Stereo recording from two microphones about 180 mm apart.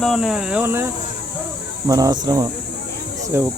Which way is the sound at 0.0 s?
Centre (ahead or behind).